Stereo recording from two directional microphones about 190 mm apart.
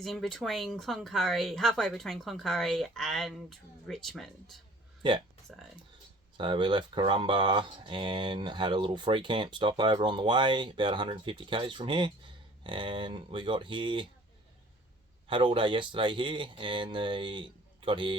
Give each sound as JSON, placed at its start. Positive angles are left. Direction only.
{"t": 0.0, "sound": "speech", "side_deg": 0}
{"t": 5.0, "sound": "speech", "side_deg": -25}
{"t": 5.5, "sound": "speech", "side_deg": 0}
{"t": 6.3, "sound": "speech", "side_deg": -25}
{"t": 15.3, "sound": "speech", "side_deg": -25}